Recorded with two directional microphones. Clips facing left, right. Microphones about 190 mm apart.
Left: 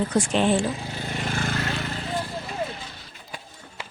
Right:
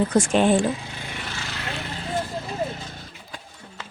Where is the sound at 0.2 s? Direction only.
50° right (ahead or behind).